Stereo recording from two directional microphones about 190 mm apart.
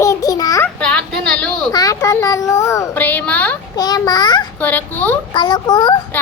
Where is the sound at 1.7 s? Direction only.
20° left (ahead or behind).